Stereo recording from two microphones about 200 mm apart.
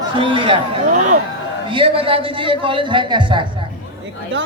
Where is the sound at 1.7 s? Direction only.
25° right (ahead or behind).